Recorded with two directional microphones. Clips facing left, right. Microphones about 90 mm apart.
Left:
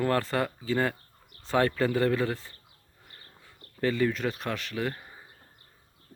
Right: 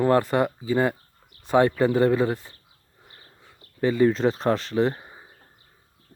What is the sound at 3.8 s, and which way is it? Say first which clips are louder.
Speech: right 6 dB; 20° right (ahead or behind).